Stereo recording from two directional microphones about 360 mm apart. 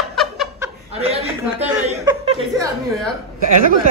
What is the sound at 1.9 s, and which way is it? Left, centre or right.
Chuckle, centre.